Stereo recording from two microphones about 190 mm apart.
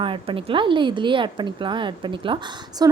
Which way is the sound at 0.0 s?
25° right (ahead or behind).